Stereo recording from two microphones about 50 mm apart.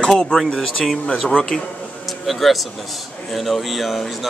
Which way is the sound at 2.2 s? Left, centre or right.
Centre.